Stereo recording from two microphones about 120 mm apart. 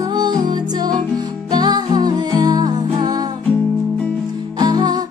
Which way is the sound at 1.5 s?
35° right (ahead or behind).